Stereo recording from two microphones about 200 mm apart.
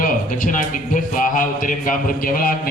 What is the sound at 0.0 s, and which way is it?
A man's voice, 45° left (ahead or behind).